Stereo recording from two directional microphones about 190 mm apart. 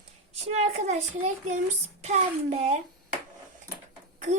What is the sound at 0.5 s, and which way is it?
A child's voice, 35° right (ahead or behind).